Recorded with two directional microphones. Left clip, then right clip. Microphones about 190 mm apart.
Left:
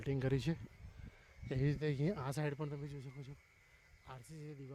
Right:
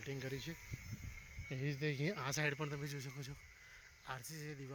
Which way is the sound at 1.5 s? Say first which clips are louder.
Left 3 dB; 45° left (ahead or behind).